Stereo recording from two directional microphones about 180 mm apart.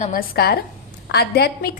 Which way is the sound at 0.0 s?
50° left (ahead or behind).